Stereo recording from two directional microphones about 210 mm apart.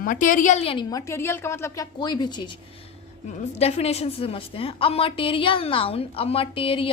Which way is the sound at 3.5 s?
30° left (ahead or behind).